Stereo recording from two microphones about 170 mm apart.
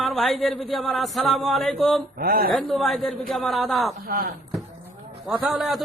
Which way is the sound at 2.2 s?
60° right (ahead or behind).